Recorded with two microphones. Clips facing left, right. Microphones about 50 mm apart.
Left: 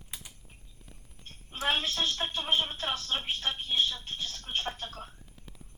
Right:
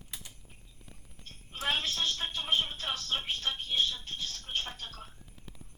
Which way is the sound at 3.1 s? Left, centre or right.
Left.